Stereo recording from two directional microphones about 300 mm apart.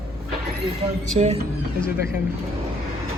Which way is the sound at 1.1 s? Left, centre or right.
Right.